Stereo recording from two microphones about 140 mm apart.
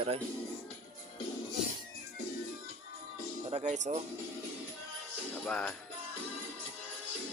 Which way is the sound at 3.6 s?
60° right (ahead or behind).